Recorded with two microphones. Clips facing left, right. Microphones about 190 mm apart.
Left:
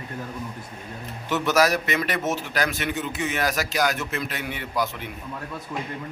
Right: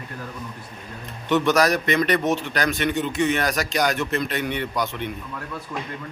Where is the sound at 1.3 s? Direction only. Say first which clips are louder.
Right 2 dB; 5° left (ahead or behind).